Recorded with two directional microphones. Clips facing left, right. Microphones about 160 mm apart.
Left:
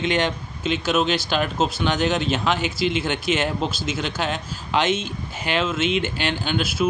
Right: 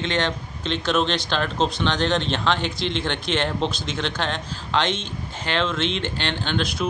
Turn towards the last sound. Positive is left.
turn(degrees=5)  # may be behind; listen again after turning